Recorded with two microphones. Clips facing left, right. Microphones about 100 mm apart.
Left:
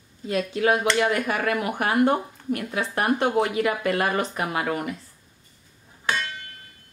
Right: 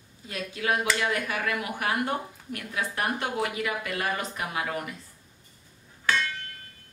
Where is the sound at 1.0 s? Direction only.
50° left (ahead or behind).